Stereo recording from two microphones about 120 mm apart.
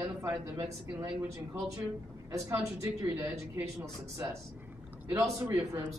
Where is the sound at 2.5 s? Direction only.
25° right (ahead or behind).